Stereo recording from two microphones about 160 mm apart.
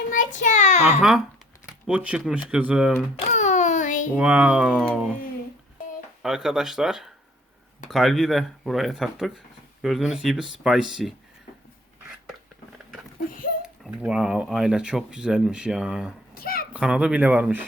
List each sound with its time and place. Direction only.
0.1 s a child's voice: 55° left (ahead or behind)
1.6 s speech: 10° right (ahead or behind)
3.2 s a sound: 45° left (ahead or behind)
4.1 s speech: 10° right (ahead or behind)
6.2 s speech: 5° right (ahead or behind)
13.9 s speech: 5° right (ahead or behind)
16.3 s a sound: 70° left (ahead or behind)
16.7 s speech: 5° right (ahead or behind)